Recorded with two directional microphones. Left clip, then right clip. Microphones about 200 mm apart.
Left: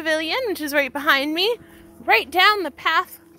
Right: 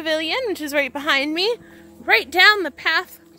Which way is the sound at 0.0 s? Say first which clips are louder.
Even; 5° right (ahead or behind).